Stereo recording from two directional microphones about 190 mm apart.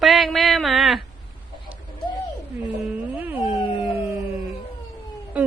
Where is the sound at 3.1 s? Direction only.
10° right (ahead or behind).